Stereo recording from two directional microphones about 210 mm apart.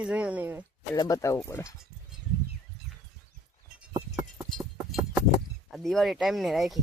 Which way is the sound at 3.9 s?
20° right (ahead or behind).